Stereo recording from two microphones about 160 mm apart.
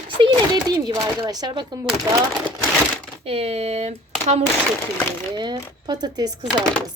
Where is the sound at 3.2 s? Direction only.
35° right (ahead or behind).